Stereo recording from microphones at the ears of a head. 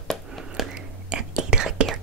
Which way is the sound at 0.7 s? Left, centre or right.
Right.